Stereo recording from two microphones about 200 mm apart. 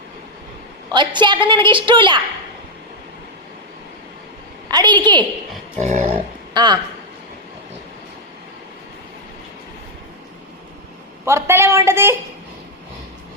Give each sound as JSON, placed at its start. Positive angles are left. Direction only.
{"t": 0.9, "sound": "a woman's voice", "side_deg": -25}
{"t": 4.7, "sound": "a woman's voice", "side_deg": -20}
{"t": 5.8, "sound": "a sound", "side_deg": -35}
{"t": 6.5, "sound": "a man's voice", "side_deg": -20}
{"t": 11.3, "sound": "a woman's voice", "side_deg": -15}